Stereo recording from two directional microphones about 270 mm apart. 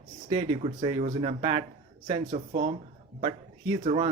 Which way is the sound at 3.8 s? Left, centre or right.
Right.